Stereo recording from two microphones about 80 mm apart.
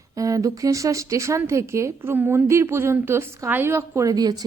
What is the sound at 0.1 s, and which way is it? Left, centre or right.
A woman's voice, right.